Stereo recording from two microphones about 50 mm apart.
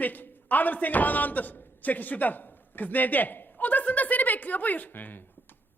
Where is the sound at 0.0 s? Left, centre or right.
Left.